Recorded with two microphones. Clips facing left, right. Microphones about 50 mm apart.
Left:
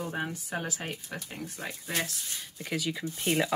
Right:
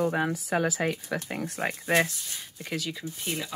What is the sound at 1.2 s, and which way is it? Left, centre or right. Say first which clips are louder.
Speech: right 8 dB; right.